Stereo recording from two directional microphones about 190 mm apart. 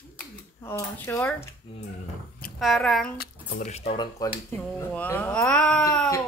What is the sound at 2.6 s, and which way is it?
Speech, centre (ahead or behind).